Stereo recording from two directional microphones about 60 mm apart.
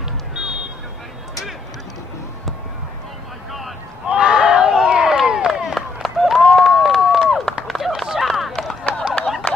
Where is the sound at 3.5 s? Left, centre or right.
Centre.